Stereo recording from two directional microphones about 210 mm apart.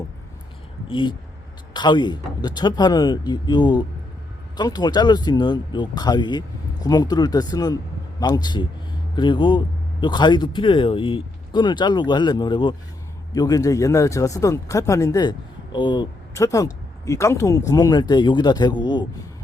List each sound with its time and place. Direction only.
0.9 s speech: 20° left (ahead or behind)